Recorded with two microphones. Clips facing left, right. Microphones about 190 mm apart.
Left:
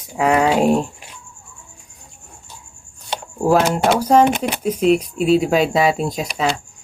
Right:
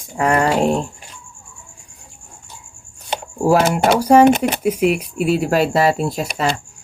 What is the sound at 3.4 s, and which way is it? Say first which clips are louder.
Speech: right 1 dB; 10° right (ahead or behind).